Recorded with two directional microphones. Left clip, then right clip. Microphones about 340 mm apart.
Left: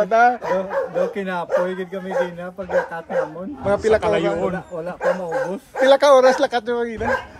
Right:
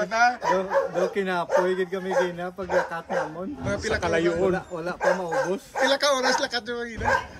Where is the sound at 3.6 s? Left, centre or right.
Centre.